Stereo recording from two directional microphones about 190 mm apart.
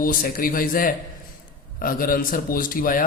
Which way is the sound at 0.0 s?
50° left (ahead or behind).